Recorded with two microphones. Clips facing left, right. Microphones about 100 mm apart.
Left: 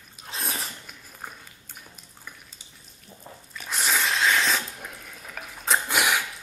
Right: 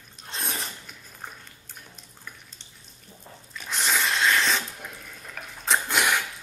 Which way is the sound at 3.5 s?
Centre (ahead or behind).